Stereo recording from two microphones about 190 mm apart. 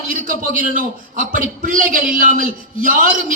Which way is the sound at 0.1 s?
45° right (ahead or behind).